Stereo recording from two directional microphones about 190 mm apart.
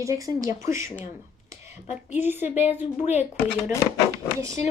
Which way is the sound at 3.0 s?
35° left (ahead or behind).